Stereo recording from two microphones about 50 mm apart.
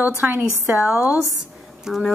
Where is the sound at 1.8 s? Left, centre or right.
Centre.